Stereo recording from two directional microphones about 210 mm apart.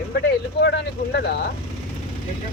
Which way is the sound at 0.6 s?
55° left (ahead or behind).